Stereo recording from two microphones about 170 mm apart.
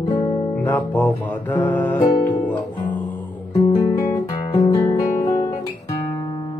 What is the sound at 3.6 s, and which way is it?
Music, 25° left (ahead or behind).